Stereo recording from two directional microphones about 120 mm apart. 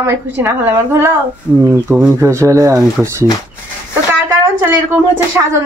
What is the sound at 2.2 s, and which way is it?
A woman's voice, 25° right (ahead or behind).